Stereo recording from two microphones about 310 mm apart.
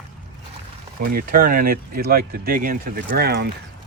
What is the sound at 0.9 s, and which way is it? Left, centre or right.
Speech, right.